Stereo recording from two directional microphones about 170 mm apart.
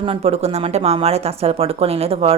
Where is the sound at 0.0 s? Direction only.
35° right (ahead or behind).